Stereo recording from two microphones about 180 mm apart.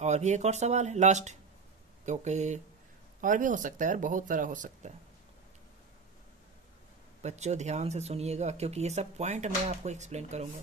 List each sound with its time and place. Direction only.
0.0 s speech: 40° right (ahead or behind)
7.2 s speech: 40° right (ahead or behind)